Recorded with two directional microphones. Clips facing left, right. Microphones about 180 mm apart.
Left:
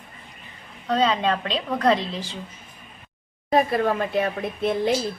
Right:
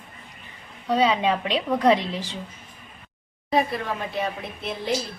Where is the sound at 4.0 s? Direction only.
55° left (ahead or behind).